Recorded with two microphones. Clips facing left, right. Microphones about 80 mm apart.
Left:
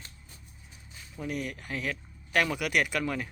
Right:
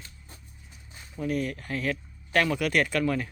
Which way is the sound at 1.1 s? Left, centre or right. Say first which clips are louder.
Right 5 dB; centre.